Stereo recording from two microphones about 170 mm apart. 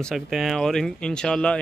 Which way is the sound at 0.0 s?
Centre (ahead or behind).